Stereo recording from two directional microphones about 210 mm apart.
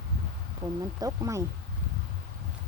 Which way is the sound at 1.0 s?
15° right (ahead or behind).